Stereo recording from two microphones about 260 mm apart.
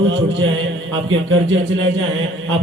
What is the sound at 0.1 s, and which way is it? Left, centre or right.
Speech, right.